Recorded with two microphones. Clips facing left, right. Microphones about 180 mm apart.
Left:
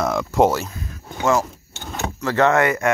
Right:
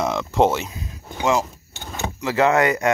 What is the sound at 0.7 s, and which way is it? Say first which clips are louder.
Roaring cats: left 1 dB; 15° right (ahead or behind).